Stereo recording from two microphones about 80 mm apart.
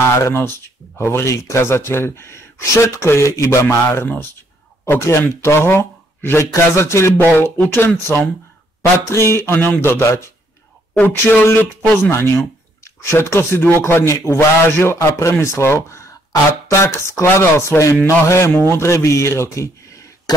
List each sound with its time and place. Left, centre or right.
0.1 s speech: left
9.5 s speech: left
11.0 s speech: left
20.3 s cough: left